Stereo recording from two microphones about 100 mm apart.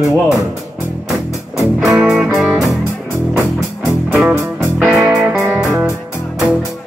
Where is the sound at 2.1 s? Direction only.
Centre (ahead or behind).